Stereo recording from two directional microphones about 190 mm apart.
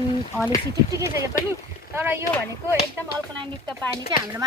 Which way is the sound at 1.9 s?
10° right (ahead or behind).